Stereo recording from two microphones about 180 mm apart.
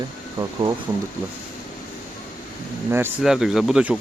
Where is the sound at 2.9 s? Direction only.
10° right (ahead or behind).